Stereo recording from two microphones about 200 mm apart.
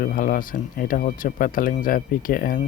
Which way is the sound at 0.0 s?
45° left (ahead or behind).